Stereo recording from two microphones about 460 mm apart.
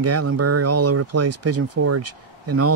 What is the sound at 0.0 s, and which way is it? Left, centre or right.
Speech, right.